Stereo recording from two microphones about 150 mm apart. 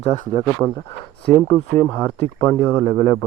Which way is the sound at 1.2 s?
15° left (ahead or behind).